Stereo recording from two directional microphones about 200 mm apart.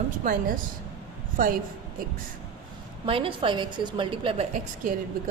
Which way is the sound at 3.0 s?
25° right (ahead or behind).